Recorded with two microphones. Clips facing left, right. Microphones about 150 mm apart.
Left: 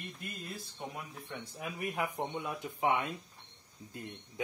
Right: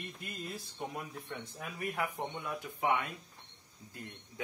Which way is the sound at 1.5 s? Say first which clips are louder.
Left 2 dB; 15° left (ahead or behind).